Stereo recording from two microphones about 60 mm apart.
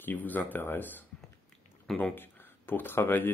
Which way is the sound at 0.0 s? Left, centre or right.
Left.